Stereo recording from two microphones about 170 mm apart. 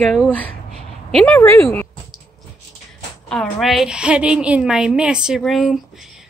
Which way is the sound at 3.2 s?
Centre (ahead or behind).